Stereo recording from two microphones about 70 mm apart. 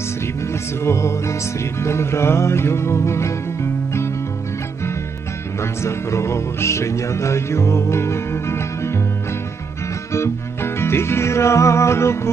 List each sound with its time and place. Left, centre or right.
0.9 s music: left
5.5 s music: left
10.1 s music: left